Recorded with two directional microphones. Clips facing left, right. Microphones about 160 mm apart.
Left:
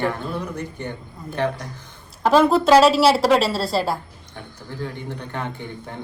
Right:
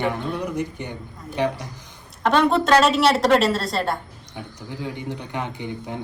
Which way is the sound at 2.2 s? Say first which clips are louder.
Left 3 dB; centre (ahead or behind).